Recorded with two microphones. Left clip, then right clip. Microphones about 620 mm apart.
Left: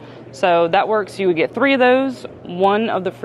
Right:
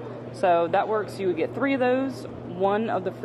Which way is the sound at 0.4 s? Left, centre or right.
Left.